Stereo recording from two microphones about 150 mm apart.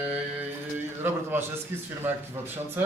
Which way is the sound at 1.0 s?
15° right (ahead or behind).